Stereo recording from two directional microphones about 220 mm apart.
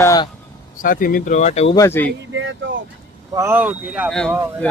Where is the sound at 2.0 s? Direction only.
60° right (ahead or behind).